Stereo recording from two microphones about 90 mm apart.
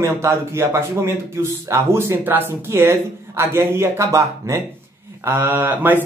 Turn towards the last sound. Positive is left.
turn(degrees=-25)  # may be behind; listen again after turning